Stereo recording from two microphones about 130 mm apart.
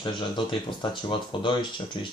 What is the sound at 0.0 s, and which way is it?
Speech, 35° left (ahead or behind).